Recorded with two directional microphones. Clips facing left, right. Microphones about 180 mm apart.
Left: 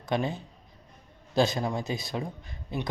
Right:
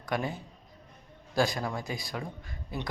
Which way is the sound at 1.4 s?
25° left (ahead or behind).